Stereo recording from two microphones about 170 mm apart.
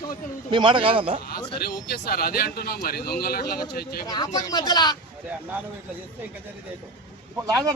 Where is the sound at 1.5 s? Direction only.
65° left (ahead or behind).